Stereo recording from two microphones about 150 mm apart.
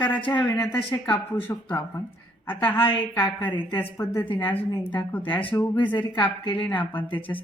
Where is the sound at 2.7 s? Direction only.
35° left (ahead or behind).